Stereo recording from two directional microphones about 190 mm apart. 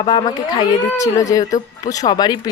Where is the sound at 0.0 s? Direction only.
20° left (ahead or behind).